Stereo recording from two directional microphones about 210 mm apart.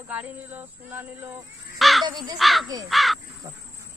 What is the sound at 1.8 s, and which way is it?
Crow, centre (ahead or behind).